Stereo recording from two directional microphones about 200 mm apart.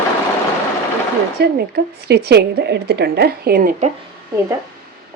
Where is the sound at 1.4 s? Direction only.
55° right (ahead or behind).